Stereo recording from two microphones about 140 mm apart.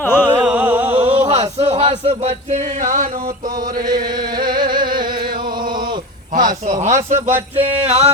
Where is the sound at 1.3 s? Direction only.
45° right (ahead or behind).